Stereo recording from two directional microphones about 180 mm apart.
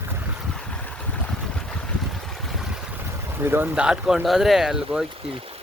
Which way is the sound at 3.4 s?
10° right (ahead or behind).